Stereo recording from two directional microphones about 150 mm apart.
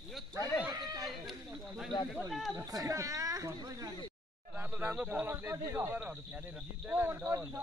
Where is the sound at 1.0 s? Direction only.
Centre (ahead or behind).